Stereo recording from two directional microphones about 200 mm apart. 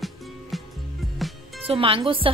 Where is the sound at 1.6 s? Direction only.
25° right (ahead or behind).